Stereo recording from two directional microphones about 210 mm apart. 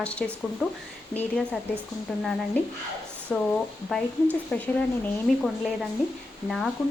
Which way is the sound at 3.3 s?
Centre (ahead or behind).